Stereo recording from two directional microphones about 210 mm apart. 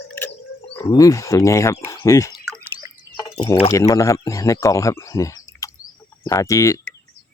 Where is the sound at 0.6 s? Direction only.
20° left (ahead or behind).